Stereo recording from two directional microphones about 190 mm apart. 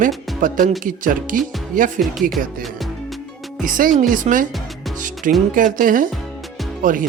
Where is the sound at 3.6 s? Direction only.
45° right (ahead or behind).